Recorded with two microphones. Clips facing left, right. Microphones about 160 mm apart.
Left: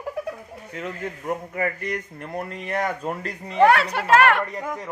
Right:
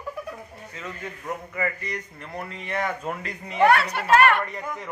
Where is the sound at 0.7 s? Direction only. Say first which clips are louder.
Left 6 dB; 60° left (ahead or behind); by 3.6 s 35° left (ahead or behind).